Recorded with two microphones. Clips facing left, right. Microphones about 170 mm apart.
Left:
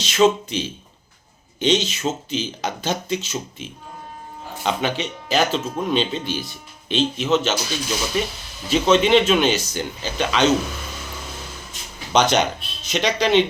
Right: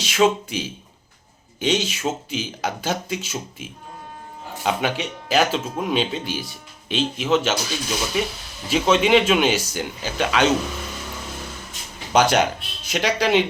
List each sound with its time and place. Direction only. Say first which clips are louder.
0.0 s speech: left 2 dB; 10° right (ahead or behind)
12.1 s speech: even; 5° right (ahead or behind)